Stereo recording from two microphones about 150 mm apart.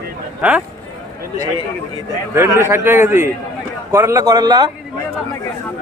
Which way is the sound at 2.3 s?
15° right (ahead or behind).